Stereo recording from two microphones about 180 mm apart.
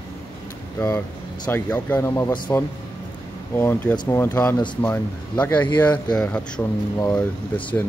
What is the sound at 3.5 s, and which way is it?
Speech, 10° left (ahead or behind).